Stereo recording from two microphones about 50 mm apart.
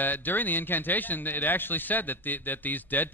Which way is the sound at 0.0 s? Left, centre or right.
Left.